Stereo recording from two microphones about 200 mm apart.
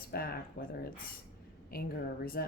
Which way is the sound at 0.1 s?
50° left (ahead or behind).